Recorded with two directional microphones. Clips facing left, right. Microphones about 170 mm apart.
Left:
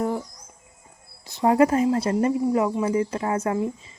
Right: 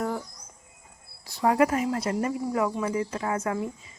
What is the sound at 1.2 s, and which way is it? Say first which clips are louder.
Speech: left 4 dB; 20° left (ahead or behind).